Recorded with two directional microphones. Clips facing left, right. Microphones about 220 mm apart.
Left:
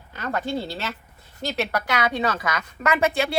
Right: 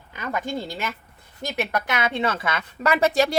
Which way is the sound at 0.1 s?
15° right (ahead or behind).